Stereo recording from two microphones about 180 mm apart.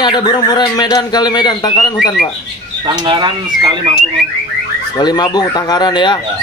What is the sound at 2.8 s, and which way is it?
Speech, 25° right (ahead or behind).